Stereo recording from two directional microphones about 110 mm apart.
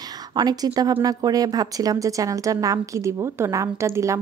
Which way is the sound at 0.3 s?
40° right (ahead or behind).